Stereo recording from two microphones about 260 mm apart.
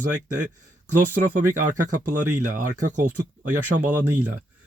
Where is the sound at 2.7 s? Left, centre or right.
Right.